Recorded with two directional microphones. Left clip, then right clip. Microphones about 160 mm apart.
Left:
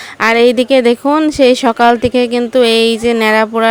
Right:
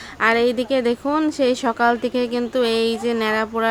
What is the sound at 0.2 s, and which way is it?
Speech, 60° left (ahead or behind).